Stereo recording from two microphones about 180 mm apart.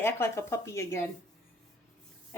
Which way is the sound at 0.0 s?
15° left (ahead or behind).